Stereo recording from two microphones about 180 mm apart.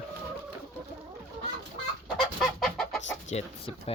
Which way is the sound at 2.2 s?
Centre (ahead or behind).